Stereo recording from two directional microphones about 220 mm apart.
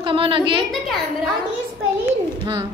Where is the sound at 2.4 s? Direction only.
20° right (ahead or behind).